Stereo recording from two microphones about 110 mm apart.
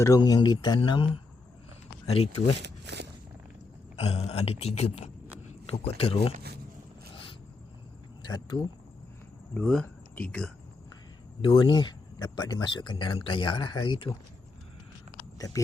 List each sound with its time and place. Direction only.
0.0 s speech: 30° left (ahead or behind)
0.8 s speech: 50° left (ahead or behind)
3.9 s speech: 70° left (ahead or behind)
5.8 s speech: 60° left (ahead or behind)
8.5 s speech: 50° left (ahead or behind)
9.6 s speech: 5° left (ahead or behind)
11.4 s speech: 50° left (ahead or behind)
15.4 s speech: 35° left (ahead or behind)